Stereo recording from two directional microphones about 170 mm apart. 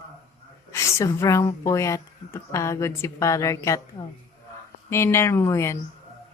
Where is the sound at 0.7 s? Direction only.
15° left (ahead or behind).